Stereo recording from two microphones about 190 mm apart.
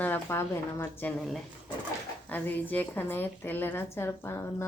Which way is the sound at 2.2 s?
10° left (ahead or behind).